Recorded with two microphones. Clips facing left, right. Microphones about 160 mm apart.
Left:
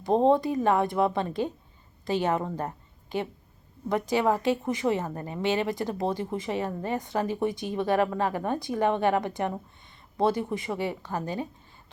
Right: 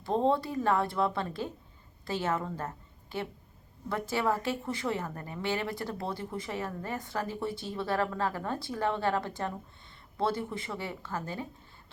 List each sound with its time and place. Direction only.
0.0 s a woman's voice: 20° left (ahead or behind)